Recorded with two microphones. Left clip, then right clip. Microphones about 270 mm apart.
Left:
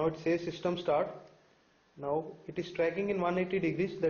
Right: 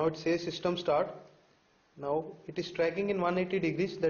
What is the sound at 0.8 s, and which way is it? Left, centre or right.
Speech, centre.